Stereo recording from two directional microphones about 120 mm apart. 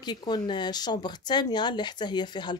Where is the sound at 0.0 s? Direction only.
35° left (ahead or behind).